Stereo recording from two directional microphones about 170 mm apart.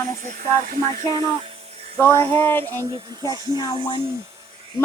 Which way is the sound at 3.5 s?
25° left (ahead or behind).